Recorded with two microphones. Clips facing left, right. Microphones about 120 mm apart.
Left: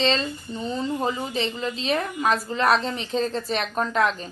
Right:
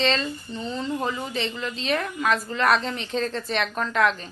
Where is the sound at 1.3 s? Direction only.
35° left (ahead or behind).